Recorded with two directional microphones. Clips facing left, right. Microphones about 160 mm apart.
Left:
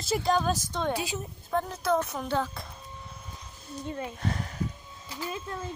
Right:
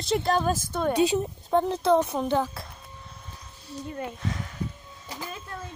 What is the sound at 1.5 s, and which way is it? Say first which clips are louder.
A child's voice: right 6 dB; 30° right (ahead or behind).